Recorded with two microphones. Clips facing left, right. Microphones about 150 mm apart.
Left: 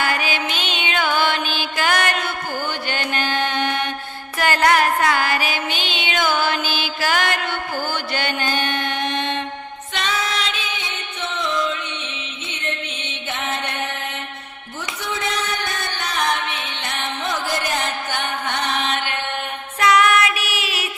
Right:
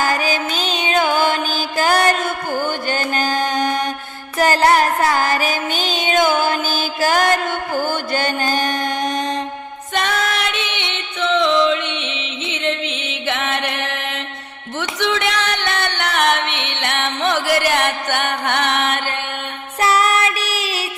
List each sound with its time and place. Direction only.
0.0 s music: 40° right (ahead or behind)
9.9 s music: 55° right (ahead or behind)
19.8 s child singing: 35° right (ahead or behind)